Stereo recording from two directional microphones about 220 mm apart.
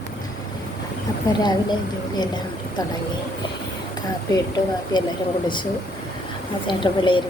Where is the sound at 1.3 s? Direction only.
20° left (ahead or behind).